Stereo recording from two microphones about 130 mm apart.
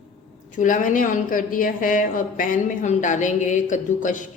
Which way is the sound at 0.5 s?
80° left.